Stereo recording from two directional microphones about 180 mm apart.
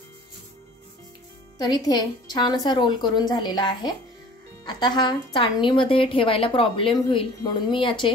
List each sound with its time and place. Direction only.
1.6 s a woman's voice: 20° left (ahead or behind)